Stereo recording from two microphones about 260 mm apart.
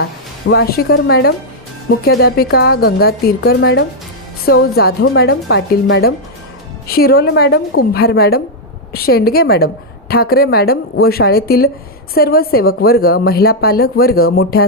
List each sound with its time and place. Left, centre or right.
0.0 s a woman's voice: left